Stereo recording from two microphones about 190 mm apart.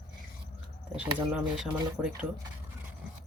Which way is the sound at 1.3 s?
5° right (ahead or behind).